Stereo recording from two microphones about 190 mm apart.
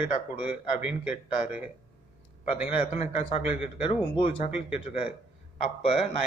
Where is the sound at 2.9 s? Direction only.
35° left (ahead or behind).